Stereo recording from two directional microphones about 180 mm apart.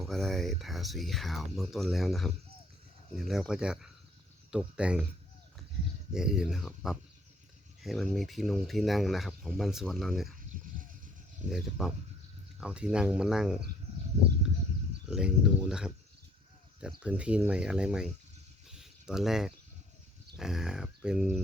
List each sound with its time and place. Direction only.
0.0 s speech: centre (ahead or behind)
6.1 s speech: 5° right (ahead or behind)
10.5 s dog: 50° right (ahead or behind)
11.5 s speech: centre (ahead or behind)
15.0 s speech: 5° right (ahead or behind)
18.7 s a sound: 5° right (ahead or behind)
20.3 s speech: 5° right (ahead or behind)